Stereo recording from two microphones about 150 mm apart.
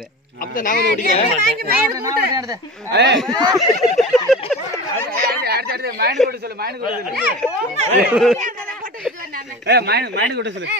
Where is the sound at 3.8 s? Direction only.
Centre (ahead or behind).